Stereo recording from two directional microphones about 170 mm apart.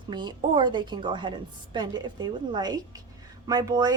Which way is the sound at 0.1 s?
25° right (ahead or behind).